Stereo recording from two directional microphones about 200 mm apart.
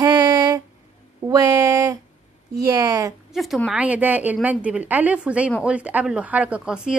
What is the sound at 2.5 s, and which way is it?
Speech, 20° right (ahead or behind).